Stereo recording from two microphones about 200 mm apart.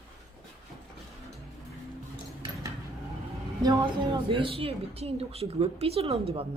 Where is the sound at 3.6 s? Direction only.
20° right (ahead or behind).